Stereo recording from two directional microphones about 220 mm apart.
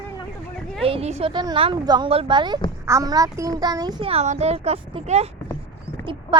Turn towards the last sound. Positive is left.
turn(degrees=-20)  # may be behind; listen again after turning